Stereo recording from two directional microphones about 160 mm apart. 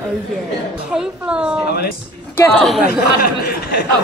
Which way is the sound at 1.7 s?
75° left (ahead or behind).